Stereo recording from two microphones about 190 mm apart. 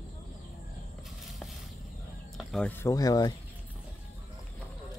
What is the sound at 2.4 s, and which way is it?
Speech, 5° left (ahead or behind).